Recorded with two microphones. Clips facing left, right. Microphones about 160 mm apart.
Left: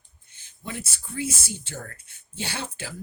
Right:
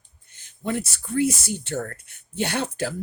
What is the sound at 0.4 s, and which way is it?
Speech, 60° right (ahead or behind).